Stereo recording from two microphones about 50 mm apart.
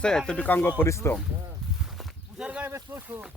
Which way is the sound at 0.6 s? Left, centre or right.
Left.